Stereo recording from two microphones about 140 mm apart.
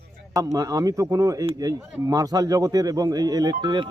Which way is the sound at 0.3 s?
25° right (ahead or behind).